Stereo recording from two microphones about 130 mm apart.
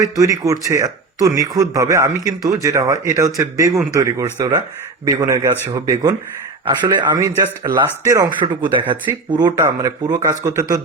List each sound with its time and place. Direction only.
0.0 s speech: 25° right (ahead or behind)